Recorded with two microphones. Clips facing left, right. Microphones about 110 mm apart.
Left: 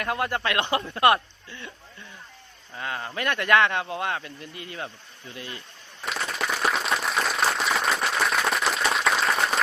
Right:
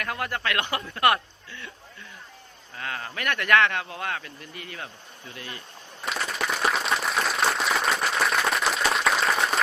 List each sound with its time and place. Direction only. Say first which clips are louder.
0.0 s speech: left 3 dB; 25° left (ahead or behind)
2.7 s speech: left 2 dB; 25° left (ahead or behind)
6.0 s applause: even; centre (ahead or behind)